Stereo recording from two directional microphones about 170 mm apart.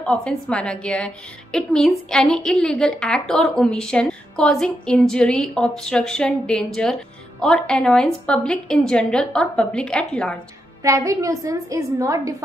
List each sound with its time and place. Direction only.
0.0 s a woman's voice: 5° left (ahead or behind)
10.8 s a woman's voice: 20° right (ahead or behind)